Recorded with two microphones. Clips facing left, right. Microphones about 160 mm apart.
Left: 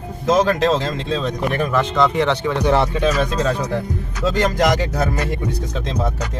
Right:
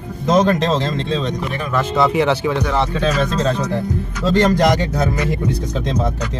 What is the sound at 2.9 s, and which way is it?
Speech, 15° left (ahead or behind).